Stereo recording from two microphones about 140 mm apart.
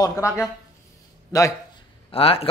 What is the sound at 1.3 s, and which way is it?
Speech, 20° left (ahead or behind).